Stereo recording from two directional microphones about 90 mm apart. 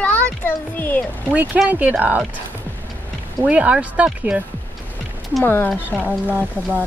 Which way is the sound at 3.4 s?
15° right (ahead or behind).